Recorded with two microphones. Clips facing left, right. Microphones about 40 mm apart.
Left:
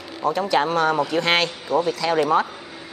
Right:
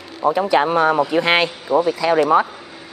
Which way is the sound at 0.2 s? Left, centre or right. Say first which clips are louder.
Right 4 dB; centre.